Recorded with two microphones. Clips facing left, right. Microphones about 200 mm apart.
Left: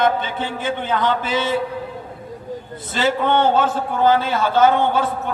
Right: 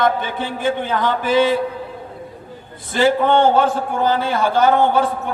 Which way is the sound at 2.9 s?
15° right (ahead or behind).